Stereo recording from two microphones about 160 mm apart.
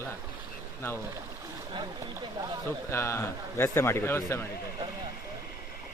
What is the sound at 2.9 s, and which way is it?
Speech, 15° left (ahead or behind).